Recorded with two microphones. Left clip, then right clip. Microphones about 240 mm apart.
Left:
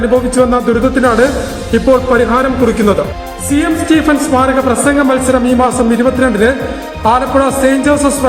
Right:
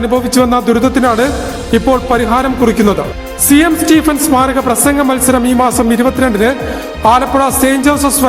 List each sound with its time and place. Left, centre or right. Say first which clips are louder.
0.3 s a man's voice: even; right